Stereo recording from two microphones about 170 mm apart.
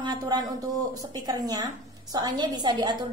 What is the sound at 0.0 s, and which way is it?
A woman's voice, 25° right (ahead or behind).